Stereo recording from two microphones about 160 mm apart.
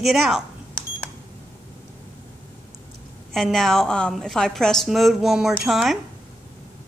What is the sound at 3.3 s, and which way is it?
A woman's voice, centre (ahead or behind).